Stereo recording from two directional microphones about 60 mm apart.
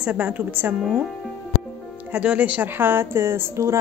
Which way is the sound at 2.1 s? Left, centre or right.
Centre.